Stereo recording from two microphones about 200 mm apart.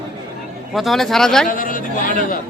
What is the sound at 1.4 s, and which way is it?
Speech, 45° left (ahead or behind).